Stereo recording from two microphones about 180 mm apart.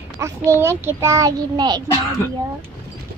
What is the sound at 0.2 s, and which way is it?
A child's voice, 15° right (ahead or behind).